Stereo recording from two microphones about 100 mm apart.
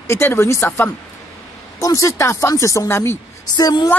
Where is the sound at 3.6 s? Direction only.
40° left (ahead or behind).